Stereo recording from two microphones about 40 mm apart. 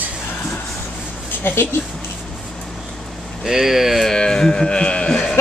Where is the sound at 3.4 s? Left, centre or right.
Centre.